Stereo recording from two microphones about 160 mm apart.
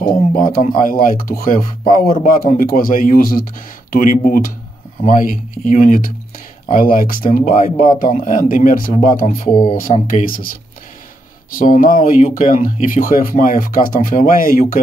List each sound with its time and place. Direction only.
0.0 s speech: 65° left (ahead or behind)
11.5 s speech: 60° left (ahead or behind)